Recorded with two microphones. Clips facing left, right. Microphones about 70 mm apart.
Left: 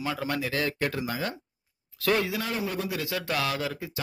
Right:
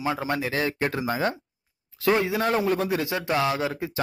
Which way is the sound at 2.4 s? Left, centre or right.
Right.